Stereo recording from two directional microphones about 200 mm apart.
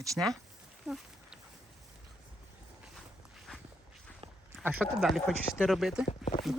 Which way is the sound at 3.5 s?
5° left (ahead or behind).